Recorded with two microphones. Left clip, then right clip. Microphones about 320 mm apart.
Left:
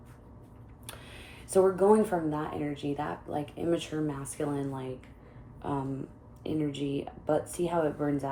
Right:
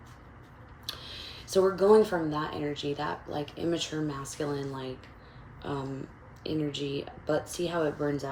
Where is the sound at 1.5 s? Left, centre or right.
Left.